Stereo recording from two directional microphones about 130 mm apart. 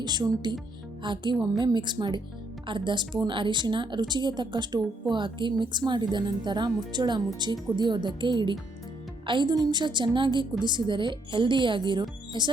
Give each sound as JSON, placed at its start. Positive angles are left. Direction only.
{"t": 0.0, "sound": "a woman's voice", "side_deg": -35}